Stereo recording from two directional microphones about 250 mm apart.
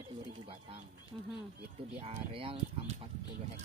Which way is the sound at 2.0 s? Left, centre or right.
Right.